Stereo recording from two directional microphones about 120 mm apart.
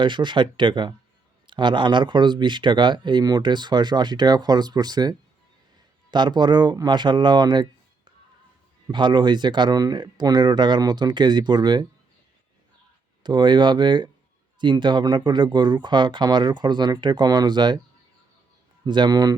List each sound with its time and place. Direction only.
0.0 s speech: 40° right (ahead or behind)
13.2 s speech: 40° right (ahead or behind)
18.9 s speech: 40° right (ahead or behind)